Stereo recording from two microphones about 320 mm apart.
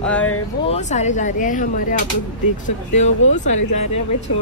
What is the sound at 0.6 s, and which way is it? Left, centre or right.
Speech, left.